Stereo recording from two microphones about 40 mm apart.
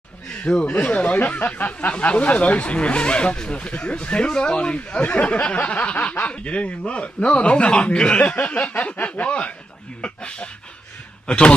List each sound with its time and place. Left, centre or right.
0.5 s speech: left
0.7 s speech: left
5.0 s speech: left
8.4 s speech: left